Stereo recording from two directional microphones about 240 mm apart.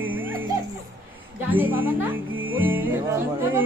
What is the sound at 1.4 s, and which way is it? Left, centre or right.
Speech, centre.